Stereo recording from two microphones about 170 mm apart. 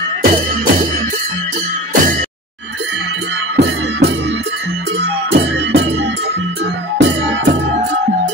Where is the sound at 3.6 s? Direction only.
90° right.